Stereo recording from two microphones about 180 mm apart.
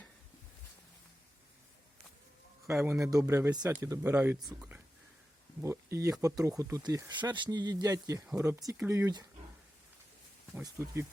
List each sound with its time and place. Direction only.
2.6 s speech: 15° right (ahead or behind)
4.4 s speech: centre (ahead or behind)
5.6 s speech: 15° right (ahead or behind)
10.6 s speech: 15° right (ahead or behind)